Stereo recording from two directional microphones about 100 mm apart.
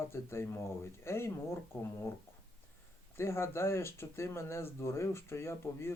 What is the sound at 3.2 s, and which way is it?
Speech, 25° left (ahead or behind).